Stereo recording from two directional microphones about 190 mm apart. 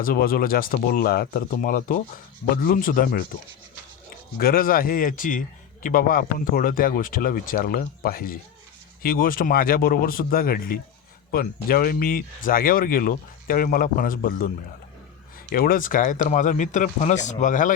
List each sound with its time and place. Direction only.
0.0 s speech: 50° left (ahead or behind)
4.4 s speech: 50° left (ahead or behind)
15.5 s speech: 50° left (ahead or behind)